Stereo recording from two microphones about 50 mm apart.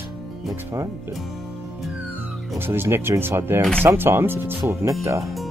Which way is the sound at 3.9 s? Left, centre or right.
Right.